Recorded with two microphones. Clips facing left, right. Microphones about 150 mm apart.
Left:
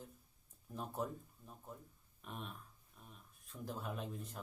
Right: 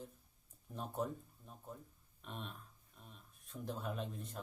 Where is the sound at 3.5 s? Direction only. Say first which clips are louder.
Right 2 dB; 20° right (ahead or behind).